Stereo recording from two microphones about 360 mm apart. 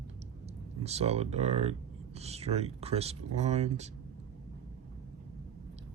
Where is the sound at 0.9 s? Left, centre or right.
Centre.